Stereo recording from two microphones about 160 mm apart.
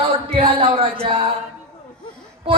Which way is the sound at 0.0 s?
35° right (ahead or behind).